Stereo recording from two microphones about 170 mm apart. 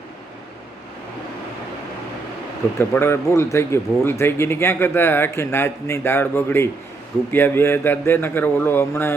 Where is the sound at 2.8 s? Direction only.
15° left (ahead or behind).